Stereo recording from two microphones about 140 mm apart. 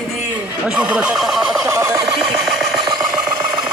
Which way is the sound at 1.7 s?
20° right (ahead or behind).